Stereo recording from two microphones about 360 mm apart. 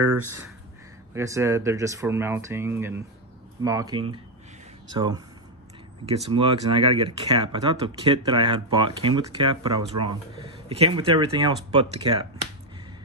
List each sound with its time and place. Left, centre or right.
1.1 s speech: centre
6.3 s speech: centre